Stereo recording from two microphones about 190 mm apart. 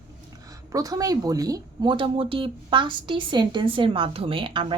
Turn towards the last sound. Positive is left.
turn(degrees=-25)  # may be behind; listen again after turning